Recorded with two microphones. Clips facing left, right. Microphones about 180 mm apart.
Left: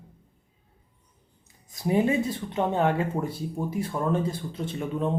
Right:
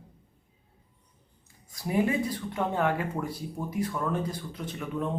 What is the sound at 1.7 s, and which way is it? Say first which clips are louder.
Speech: left 3 dB; 25° left (ahead or behind).